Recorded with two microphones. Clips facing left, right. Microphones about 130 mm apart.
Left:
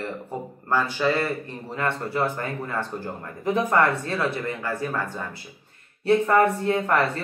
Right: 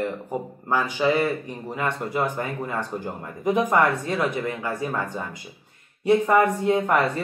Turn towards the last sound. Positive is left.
turn(degrees=-15)  # may be behind; listen again after turning